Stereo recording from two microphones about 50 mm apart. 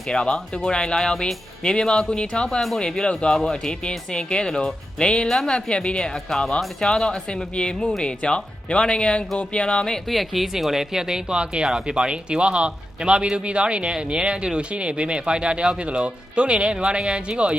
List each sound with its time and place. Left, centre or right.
0.1 s speech: centre
10.1 s speech: centre; by 17.6 s right